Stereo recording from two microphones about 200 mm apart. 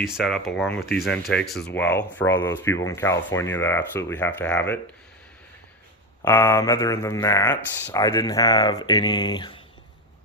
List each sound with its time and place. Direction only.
0.0 s speech: centre (ahead or behind)
6.2 s speech: 10° left (ahead or behind)